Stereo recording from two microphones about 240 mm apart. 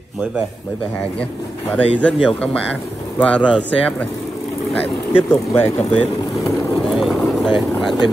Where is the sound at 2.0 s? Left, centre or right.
Centre.